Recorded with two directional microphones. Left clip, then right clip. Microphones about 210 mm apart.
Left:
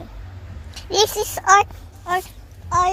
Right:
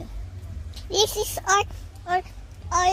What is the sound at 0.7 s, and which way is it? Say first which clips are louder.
A child's voice: left 4 dB; centre (ahead or behind).